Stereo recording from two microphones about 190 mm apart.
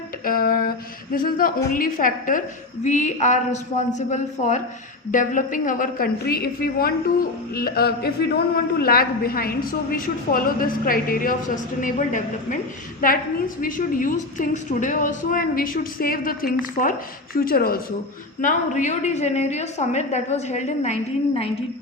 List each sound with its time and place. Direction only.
0.3 s a woman's voice: 50° left (ahead or behind)
7.5 s a sound: 55° left (ahead or behind)
8.8 s a woman's voice: 50° left (ahead or behind)
13.6 s a woman's voice: 45° left (ahead or behind)
18.4 s a woman's voice: 40° left (ahead or behind)